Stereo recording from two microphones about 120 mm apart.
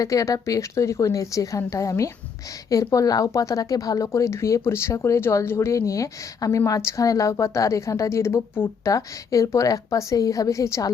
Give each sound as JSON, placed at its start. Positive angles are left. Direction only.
{"t": 0.0, "sound": "speech", "side_deg": 30}